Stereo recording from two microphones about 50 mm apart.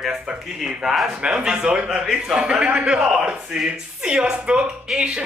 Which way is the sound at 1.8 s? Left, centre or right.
Centre.